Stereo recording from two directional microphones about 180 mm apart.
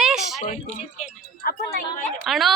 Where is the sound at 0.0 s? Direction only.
Centre (ahead or behind).